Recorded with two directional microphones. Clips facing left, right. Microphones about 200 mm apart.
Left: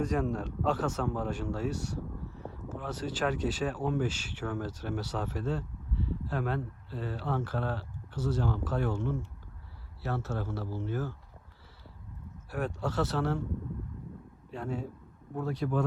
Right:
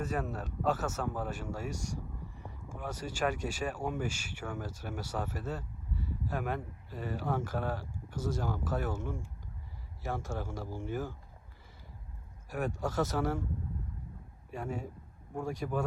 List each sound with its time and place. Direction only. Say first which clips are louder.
0.0 s speech: left 5 dB; 5° right (ahead or behind)
12.5 s speech: left 1 dB; 10° right (ahead or behind)
14.5 s speech: left 2 dB; 10° right (ahead or behind)